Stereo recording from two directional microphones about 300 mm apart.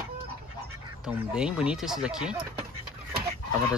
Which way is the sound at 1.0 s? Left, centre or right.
Centre.